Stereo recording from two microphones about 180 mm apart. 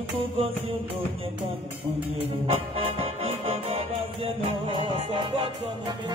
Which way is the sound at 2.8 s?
30° right (ahead or behind).